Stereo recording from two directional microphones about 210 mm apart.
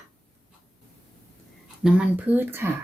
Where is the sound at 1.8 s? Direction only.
5° right (ahead or behind).